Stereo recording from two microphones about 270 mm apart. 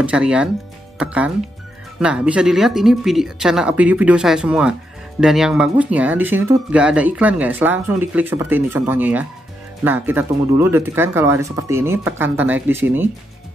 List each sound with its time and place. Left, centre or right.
0.0 s speech: centre